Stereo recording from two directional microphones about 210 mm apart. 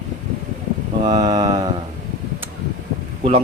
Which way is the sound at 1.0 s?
20° right (ahead or behind).